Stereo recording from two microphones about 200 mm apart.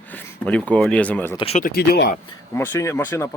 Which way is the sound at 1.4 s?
30° left (ahead or behind).